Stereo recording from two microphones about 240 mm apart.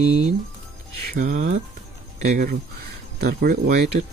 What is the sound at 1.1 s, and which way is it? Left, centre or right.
Speech, right.